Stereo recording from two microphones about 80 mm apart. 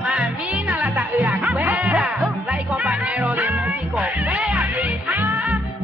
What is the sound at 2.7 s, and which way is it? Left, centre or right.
Music, centre.